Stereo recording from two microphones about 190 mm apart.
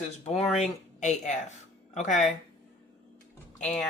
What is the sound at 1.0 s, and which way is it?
Speech, 40° left (ahead or behind).